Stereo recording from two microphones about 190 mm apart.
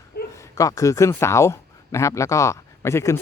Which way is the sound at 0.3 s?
15° left (ahead or behind).